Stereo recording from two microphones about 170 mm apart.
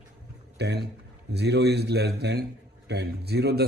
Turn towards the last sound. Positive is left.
turn(degrees=-75)  # may be behind; listen again after turning